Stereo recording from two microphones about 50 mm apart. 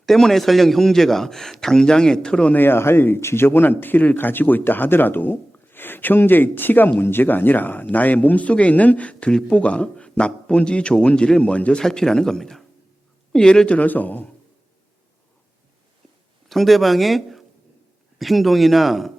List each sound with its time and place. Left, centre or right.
0.0 s a man's voice: centre
2.5 s speech: left
2.7 s speech: left
11.8 s a man's voice: centre; by 14.3 s left
16.5 s speech: centre